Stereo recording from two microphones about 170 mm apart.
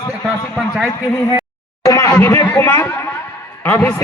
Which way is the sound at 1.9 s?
15° left (ahead or behind).